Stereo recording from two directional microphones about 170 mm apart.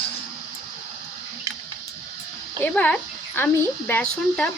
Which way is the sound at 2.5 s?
10° left (ahead or behind).